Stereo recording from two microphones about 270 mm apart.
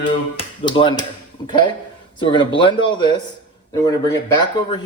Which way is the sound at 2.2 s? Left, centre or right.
Centre.